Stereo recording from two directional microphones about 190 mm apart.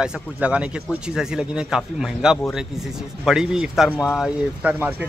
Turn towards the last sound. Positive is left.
turn(degrees=-10)  # may be behind; listen again after turning